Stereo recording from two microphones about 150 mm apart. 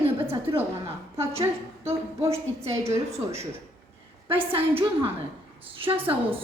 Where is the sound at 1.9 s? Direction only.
20° right (ahead or behind).